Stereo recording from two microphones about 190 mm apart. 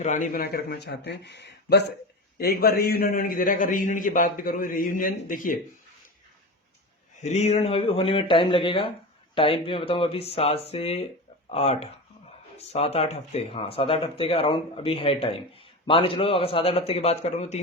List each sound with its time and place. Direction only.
0.0 s a man's voice: 40° left (ahead or behind)
7.2 s a man's voice: 35° left (ahead or behind)